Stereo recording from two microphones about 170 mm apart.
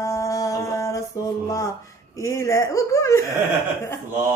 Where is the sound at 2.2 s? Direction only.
15° left (ahead or behind).